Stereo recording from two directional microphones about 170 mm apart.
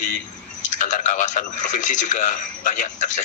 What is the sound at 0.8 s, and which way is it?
A man's voice, 45° left (ahead or behind).